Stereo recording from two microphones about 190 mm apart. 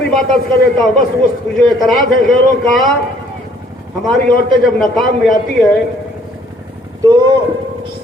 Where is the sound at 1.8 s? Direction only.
Centre (ahead or behind).